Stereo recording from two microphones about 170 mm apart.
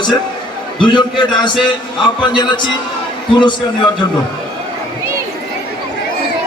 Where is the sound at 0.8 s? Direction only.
30° left (ahead or behind).